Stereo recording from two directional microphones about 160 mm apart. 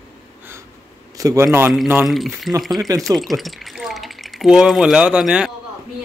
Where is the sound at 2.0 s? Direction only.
Centre (ahead or behind).